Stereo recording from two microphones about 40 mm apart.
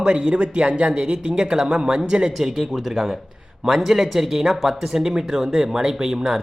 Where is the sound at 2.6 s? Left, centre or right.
Centre.